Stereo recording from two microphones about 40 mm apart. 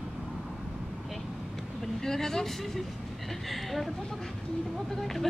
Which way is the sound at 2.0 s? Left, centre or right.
Centre.